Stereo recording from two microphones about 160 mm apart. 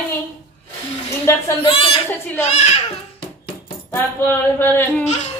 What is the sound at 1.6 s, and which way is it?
A child's voice, 35° left (ahead or behind).